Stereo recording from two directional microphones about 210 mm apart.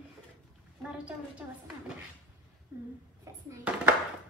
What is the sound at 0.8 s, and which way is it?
Speech, 5° right (ahead or behind).